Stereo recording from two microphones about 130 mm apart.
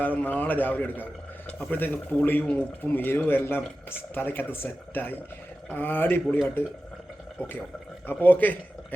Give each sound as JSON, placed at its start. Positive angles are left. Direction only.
{"t": 0.0, "sound": "speech", "side_deg": 15}
{"t": 8.0, "sound": "speech", "side_deg": 15}